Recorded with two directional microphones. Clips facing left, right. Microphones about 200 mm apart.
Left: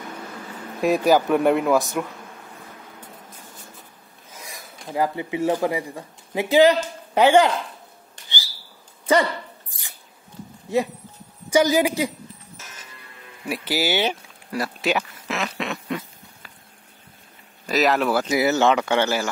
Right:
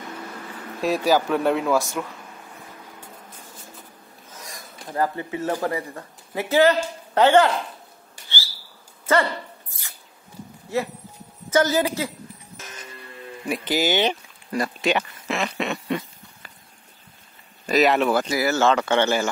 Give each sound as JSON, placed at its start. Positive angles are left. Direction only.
{"t": 0.9, "sound": "speech", "side_deg": 15}
{"t": 4.8, "sound": "speech", "side_deg": 10}
{"t": 9.0, "sound": "dog", "side_deg": 15}
{"t": 11.5, "sound": "speech", "side_deg": 15}
{"t": 13.5, "sound": "speech", "side_deg": 10}
{"t": 17.6, "sound": "speech", "side_deg": 0}
{"t": 18.3, "sound": "speech", "side_deg": 20}